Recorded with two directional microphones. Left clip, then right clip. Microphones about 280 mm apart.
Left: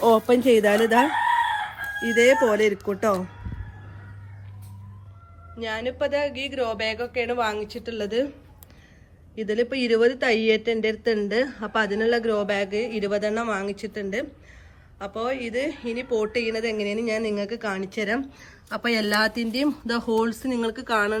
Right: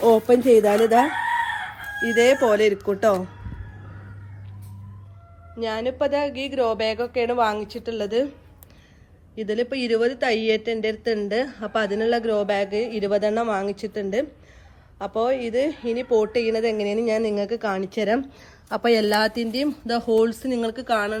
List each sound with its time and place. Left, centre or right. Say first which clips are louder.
0.0 s a sound: right 2 dB; centre
0.4 s speech: right 2 dB; left
1.5 s chicken: left 1 dB; left
5.5 s a woman's voice: right 3 dB; centre
9.3 s a woman's voice: even; centre